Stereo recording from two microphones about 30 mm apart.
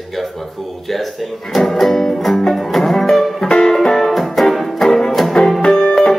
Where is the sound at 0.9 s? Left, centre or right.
Centre.